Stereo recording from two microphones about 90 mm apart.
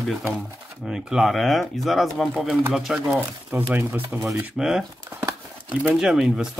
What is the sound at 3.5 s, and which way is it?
Speech, 20° right (ahead or behind).